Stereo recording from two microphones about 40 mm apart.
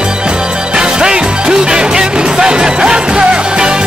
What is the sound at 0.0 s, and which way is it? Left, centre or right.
Music, right.